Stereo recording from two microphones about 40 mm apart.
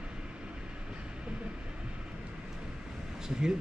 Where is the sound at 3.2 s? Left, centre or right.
Centre.